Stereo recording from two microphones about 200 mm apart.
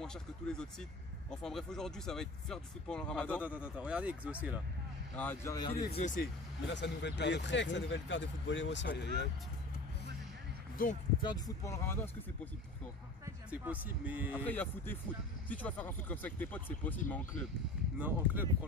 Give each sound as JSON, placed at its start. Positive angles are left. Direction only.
{"t": 0.0, "sound": "speech", "side_deg": 5}
{"t": 3.4, "sound": "speech", "side_deg": -5}
{"t": 5.1, "sound": "speech", "side_deg": 10}
{"t": 5.9, "sound": "speech", "side_deg": 40}
{"t": 6.7, "sound": "speech", "side_deg": 60}
{"t": 10.8, "sound": "speech", "side_deg": 45}
{"t": 11.2, "sound": "speech", "side_deg": 20}
{"t": 13.2, "sound": "speech", "side_deg": -10}
{"t": 14.4, "sound": "speech", "side_deg": 10}
{"t": 17.9, "sound": "speech", "side_deg": -10}